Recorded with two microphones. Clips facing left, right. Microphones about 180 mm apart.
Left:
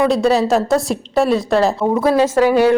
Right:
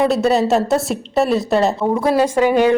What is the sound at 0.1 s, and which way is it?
A woman's voice, centre (ahead or behind).